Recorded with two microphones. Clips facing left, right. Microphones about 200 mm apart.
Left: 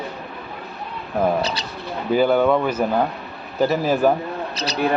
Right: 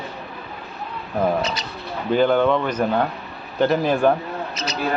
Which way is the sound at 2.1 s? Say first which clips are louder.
Left 1 dB; 10° left (ahead or behind).